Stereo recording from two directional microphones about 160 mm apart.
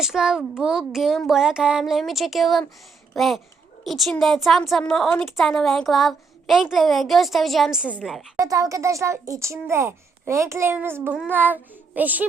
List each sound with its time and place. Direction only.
0.0 s a woman's voice: 5° right (ahead or behind)
8.4 s a child's voice: 20° right (ahead or behind)